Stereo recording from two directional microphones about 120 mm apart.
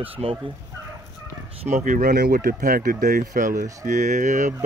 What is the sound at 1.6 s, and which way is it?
Speech, 75° right (ahead or behind).